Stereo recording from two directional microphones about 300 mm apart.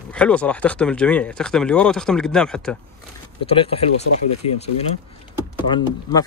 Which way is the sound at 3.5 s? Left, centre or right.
Centre.